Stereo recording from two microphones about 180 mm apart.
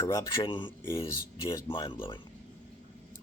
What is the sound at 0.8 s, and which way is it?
Speech, 15° left (ahead or behind).